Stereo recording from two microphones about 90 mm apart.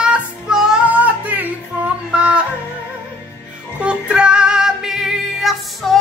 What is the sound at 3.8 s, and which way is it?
Music, 10° right (ahead or behind).